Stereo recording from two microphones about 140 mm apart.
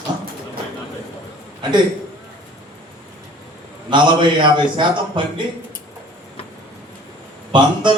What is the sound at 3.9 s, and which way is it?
A man's voice, 35° right (ahead or behind).